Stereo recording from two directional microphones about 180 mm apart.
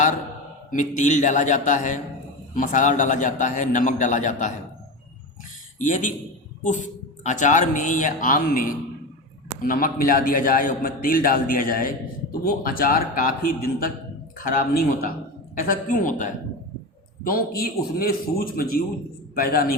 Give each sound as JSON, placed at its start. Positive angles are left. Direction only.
{"t": 0.7, "sound": "a man's voice", "side_deg": 45}
{"t": 5.8, "sound": "a man's voice", "side_deg": 45}
{"t": 17.2, "sound": "a man's voice", "side_deg": 55}